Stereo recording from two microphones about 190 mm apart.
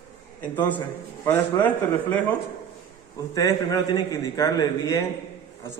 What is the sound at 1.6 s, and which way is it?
Speech, 10° left (ahead or behind).